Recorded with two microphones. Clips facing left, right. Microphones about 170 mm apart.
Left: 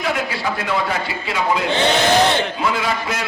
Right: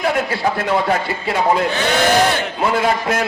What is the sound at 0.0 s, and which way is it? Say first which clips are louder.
A man's voice: right 4 dB; 50° right (ahead or behind).